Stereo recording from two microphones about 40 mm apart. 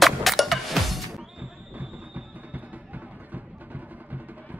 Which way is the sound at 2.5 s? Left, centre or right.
Right.